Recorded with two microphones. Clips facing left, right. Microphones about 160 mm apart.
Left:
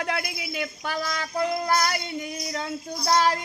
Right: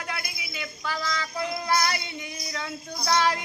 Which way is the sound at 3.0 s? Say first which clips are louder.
Left 2 dB; 40° left (ahead or behind).